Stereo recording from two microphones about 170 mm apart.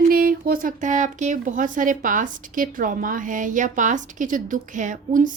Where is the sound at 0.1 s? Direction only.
60° right (ahead or behind).